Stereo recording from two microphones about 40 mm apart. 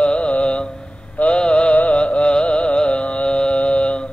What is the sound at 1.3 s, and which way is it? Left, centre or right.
Mantra, left.